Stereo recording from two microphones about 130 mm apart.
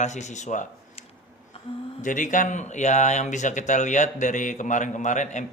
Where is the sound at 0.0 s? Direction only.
65° left (ahead or behind).